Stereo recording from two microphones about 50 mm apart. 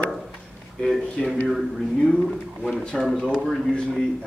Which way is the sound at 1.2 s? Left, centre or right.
Centre.